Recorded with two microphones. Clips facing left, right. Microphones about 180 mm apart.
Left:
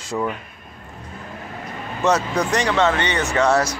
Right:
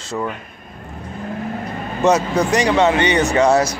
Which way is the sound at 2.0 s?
10° right (ahead or behind).